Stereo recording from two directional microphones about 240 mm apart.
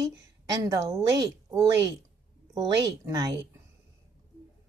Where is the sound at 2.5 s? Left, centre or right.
Centre.